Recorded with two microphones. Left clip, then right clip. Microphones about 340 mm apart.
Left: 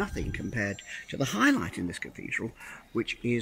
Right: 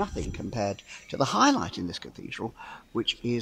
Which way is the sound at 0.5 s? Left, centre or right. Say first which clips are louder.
Right 3 dB; right.